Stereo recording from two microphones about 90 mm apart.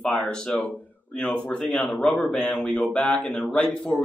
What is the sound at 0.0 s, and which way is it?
Speech, 5° left (ahead or behind).